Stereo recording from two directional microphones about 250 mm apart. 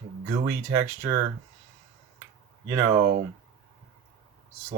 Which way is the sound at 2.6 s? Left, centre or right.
Centre.